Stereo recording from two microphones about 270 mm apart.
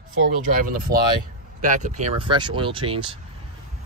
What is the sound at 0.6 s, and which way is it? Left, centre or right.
Speech, right.